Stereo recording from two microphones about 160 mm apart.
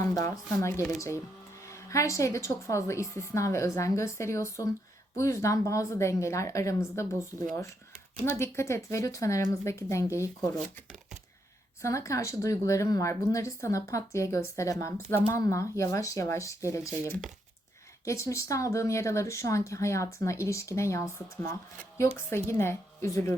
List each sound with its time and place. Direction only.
0.0 s a woman's voice: 20° left (ahead or behind)
11.8 s a woman's voice: 20° left (ahead or behind)